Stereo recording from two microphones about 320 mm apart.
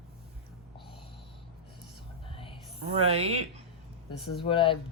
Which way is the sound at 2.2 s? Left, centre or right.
Centre.